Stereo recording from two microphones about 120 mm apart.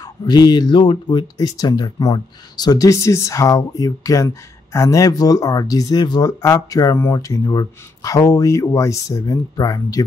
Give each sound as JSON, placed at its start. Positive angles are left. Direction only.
{"t": 0.0, "sound": "speech", "side_deg": 35}